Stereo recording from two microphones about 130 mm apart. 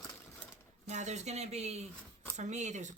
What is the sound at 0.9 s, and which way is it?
Speech, 65° right (ahead or behind).